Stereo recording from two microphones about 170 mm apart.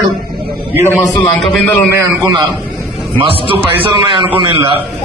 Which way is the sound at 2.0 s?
20° right (ahead or behind).